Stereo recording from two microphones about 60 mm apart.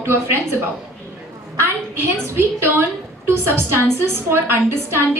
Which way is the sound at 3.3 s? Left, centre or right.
Right.